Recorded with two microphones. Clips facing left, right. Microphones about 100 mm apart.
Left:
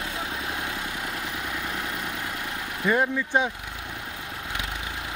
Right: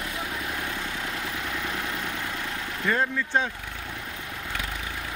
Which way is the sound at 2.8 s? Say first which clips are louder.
Left 3 dB; 15° left (ahead or behind).